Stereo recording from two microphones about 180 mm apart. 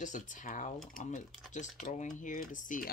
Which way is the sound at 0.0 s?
45° left (ahead or behind).